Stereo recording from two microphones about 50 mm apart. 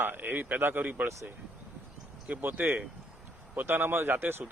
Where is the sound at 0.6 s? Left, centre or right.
Right.